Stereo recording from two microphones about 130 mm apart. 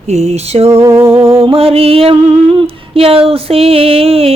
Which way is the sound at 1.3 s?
45° right (ahead or behind).